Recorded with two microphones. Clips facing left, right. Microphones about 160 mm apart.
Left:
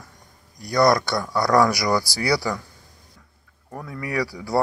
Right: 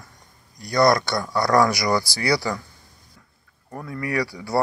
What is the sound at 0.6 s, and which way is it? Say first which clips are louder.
A man's voice: even; 10° left (ahead or behind).